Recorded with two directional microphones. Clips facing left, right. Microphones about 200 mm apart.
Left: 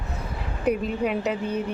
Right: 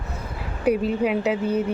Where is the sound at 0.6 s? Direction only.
5° right (ahead or behind).